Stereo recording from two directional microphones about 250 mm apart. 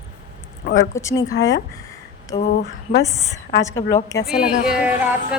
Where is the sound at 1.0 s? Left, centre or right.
Centre.